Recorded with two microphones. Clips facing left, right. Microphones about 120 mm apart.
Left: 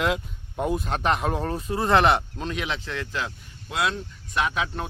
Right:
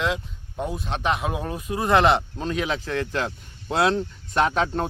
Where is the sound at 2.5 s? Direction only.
35° right (ahead or behind).